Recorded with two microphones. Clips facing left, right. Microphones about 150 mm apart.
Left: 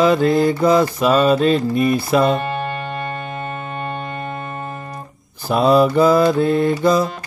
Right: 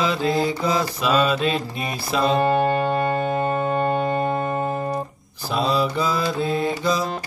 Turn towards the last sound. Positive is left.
turn(degrees=50)  # may be behind; listen again after turning